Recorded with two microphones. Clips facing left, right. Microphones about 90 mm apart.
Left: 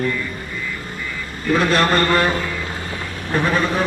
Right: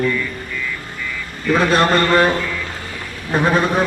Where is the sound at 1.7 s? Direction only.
15° right (ahead or behind).